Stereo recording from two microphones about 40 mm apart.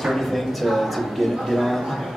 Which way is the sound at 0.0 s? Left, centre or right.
Centre.